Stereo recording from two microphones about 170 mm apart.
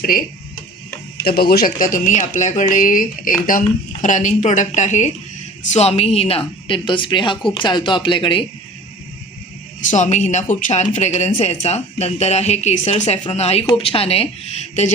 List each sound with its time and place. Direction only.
1.2 s a woman's voice: 65° left (ahead or behind); by 8.4 s 30° left (ahead or behind)
9.9 s speech: 45° left (ahead or behind)